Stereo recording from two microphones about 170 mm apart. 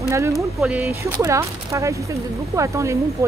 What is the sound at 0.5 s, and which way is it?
Speech, 5° right (ahead or behind).